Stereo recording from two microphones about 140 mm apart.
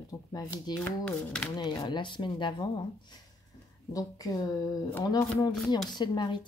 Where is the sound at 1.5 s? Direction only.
30° left (ahead or behind).